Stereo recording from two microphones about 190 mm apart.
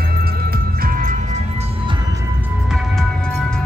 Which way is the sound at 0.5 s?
50° right (ahead or behind).